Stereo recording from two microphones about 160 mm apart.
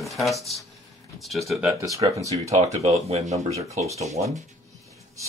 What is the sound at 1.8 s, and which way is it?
Speech, 20° right (ahead or behind).